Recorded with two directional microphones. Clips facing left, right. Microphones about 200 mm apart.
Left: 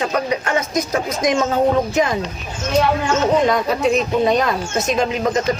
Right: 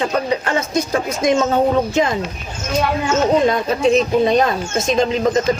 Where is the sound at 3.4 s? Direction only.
25° right (ahead or behind).